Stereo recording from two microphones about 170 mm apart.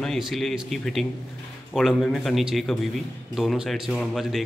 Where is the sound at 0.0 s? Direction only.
Centre (ahead or behind).